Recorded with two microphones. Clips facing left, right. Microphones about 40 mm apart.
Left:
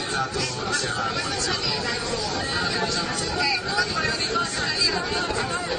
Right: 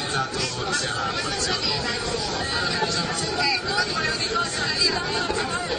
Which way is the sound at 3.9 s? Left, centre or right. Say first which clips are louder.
Even; centre.